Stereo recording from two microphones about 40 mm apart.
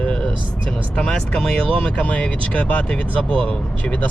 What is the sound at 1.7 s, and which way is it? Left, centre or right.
Speech, left.